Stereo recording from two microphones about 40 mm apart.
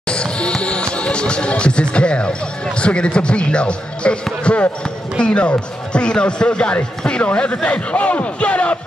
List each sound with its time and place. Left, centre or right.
0.1 s speech: left